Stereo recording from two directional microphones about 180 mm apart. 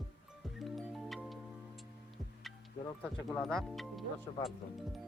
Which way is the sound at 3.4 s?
Centre (ahead or behind).